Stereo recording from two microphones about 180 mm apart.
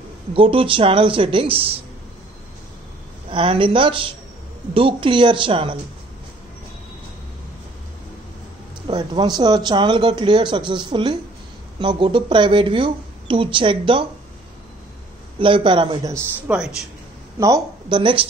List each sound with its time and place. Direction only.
0.3 s speech: 30° right (ahead or behind)
3.3 s speech: 30° right (ahead or behind)
8.8 s speech: 25° right (ahead or behind)
15.3 s speech: 30° right (ahead or behind)
16.5 s speech: 10° right (ahead or behind)
17.4 s speech: 20° right (ahead or behind)